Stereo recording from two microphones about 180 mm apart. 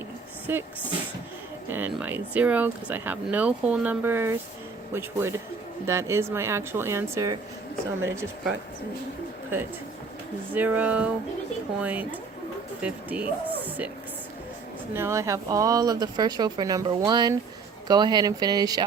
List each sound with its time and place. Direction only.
0.5 s speech: 10° right (ahead or behind)
10.5 s speech: 10° right (ahead or behind)
14.9 s speech: 15° right (ahead or behind)